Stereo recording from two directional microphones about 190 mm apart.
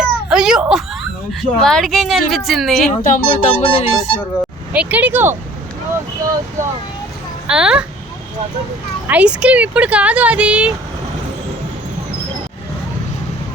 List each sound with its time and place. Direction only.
0.0 s whimper: 5° right (ahead or behind)
1.3 s speech: centre (ahead or behind)
2.9 s speech: 40° left (ahead or behind)
4.7 s speech: 5° right (ahead or behind)
7.4 s speech: 5° right (ahead or behind)
9.0 s speech: 5° right (ahead or behind)